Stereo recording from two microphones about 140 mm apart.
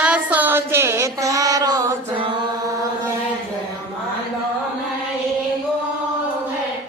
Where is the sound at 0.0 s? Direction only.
10° right (ahead or behind); by 2.2 s 25° right (ahead or behind).